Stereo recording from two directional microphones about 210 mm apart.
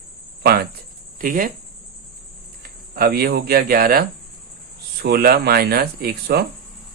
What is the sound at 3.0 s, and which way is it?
Speech, 45° right (ahead or behind).